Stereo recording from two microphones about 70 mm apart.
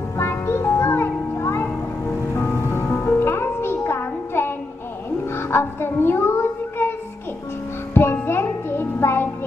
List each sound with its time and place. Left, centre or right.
0.2 s music: left
7.9 s music: left